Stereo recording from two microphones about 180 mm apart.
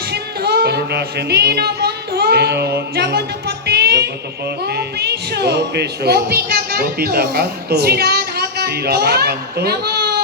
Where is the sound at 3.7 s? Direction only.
60° right (ahead or behind).